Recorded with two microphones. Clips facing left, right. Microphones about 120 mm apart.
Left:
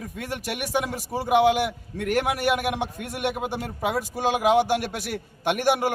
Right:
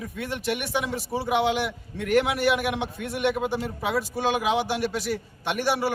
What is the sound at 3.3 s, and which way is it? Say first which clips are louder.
Speech: right 3 dB; 10° left (ahead or behind).